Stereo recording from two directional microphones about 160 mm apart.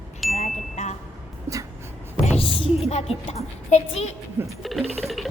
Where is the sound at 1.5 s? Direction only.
15° right (ahead or behind).